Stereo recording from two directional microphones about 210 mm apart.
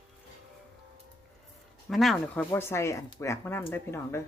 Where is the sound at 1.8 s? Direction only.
Centre (ahead or behind).